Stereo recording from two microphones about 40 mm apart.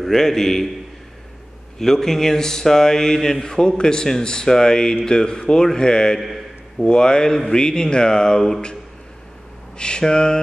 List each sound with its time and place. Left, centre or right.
0.0 s speech: centre
1.8 s speech: centre
6.1 s a man's voice: centre
6.8 s speech: left
9.8 s speech: left